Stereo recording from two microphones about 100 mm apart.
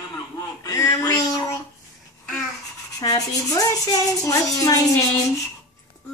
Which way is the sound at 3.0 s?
35° left (ahead or behind).